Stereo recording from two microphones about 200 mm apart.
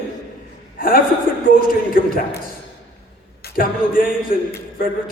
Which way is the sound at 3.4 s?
45° left (ahead or behind).